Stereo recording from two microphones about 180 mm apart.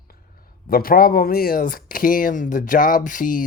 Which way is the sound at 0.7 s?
55° left (ahead or behind).